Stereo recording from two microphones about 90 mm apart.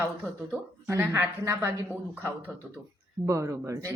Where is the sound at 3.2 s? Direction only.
35° right (ahead or behind).